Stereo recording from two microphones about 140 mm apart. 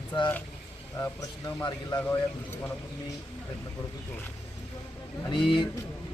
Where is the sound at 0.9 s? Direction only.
20° left (ahead or behind).